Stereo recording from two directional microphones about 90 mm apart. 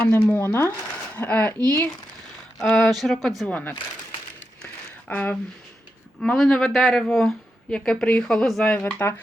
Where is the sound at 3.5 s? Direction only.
15° left (ahead or behind).